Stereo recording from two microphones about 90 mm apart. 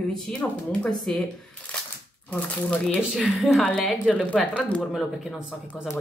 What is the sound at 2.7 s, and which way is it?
Speech, 15° left (ahead or behind).